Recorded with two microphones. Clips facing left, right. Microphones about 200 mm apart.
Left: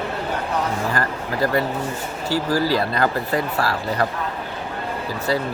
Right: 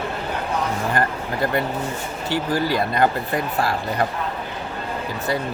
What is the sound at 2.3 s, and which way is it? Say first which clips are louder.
Speech: left 2 dB; 20° right (ahead or behind).